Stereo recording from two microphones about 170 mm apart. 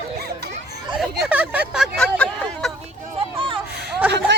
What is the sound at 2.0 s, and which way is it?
Vehicle, 5° left (ahead or behind).